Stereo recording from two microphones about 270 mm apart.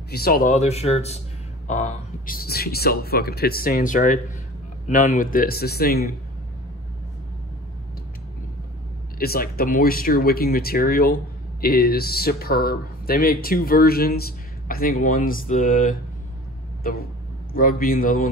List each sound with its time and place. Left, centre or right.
0.1 s speech: left
9.2 s speech: left
17.5 s speech: left